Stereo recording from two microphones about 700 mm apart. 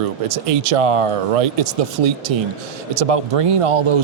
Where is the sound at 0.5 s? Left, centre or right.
Right.